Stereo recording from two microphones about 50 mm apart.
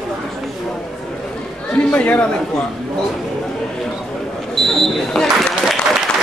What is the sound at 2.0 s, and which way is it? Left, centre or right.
Speech, left.